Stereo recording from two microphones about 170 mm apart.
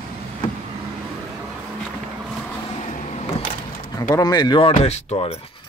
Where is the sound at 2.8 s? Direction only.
40° left (ahead or behind).